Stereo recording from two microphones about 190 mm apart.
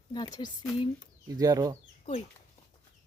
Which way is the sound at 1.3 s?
20° right (ahead or behind).